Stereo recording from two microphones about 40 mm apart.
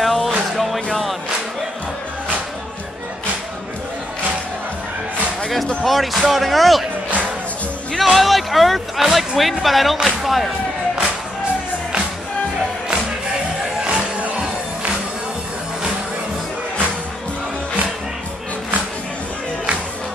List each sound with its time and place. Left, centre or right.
0.0 s music: centre
5.9 s speech: centre
8.0 s speech: centre
9.0 s speech: centre
9.4 s speech: centre
13.8 s music: right